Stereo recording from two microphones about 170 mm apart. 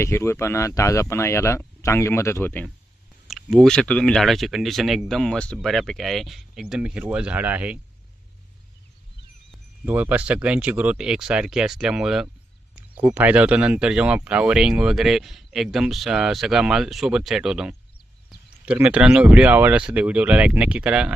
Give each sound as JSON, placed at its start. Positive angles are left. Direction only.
{"t": 0.0, "sound": "speech", "side_deg": 15}
{"t": 3.2, "sound": "speech", "side_deg": 0}
{"t": 9.8, "sound": "speech", "side_deg": -10}